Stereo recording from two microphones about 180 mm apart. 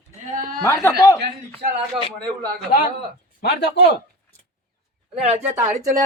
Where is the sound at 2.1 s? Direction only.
5° left (ahead or behind).